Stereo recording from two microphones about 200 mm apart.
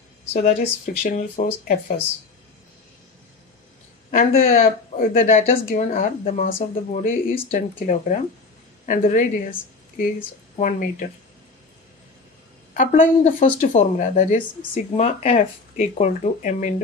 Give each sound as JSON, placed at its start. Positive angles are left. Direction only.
{"t": 0.3, "sound": "speech", "side_deg": 40}
{"t": 4.1, "sound": "speech", "side_deg": 45}
{"t": 4.4, "sound": "speech", "side_deg": 30}
{"t": 4.9, "sound": "speech", "side_deg": 45}
{"t": 10.6, "sound": "speech", "side_deg": 40}
{"t": 12.7, "sound": "speech", "side_deg": 40}